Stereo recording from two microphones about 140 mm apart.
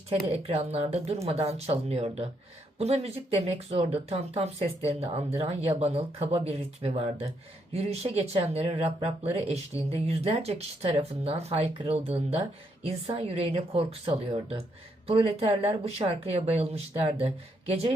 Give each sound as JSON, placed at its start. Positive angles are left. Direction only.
{"t": 0.1, "sound": "speech", "side_deg": -45}